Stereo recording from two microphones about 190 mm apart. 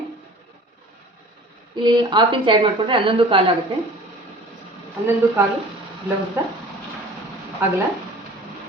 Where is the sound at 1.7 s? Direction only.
25° right (ahead or behind).